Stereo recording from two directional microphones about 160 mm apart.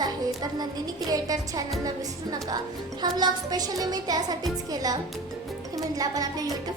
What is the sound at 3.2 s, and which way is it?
Speech, 25° right (ahead or behind).